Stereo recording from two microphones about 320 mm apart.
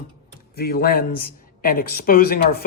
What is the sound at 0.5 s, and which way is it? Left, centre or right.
Speech, left.